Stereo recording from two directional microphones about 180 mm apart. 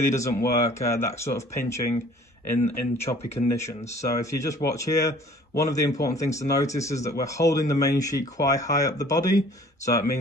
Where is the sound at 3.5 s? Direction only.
15° left (ahead or behind).